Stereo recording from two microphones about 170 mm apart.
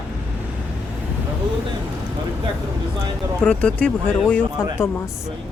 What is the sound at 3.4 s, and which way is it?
Speech, 5° left (ahead or behind).